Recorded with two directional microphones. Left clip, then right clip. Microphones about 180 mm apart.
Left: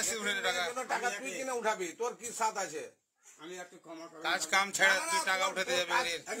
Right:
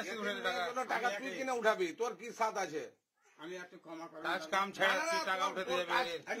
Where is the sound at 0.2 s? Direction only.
5° left (ahead or behind).